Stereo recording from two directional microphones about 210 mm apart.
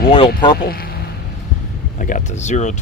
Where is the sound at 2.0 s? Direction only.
35° left (ahead or behind).